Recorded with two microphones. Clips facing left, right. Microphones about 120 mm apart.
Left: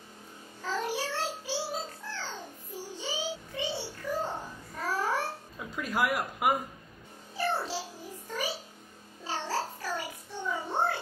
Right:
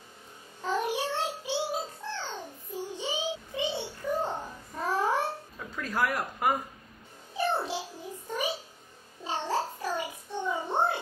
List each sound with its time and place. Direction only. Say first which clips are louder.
0.6 s music: right 3 dB; 20° right (ahead or behind)
5.8 s speech: even; 10° left (ahead or behind)
7.3 s music: right 2 dB; 20° right (ahead or behind)
8.3 s a sound: right 3 dB; 20° right (ahead or behind)
9.2 s music: right 3 dB; 20° right (ahead or behind)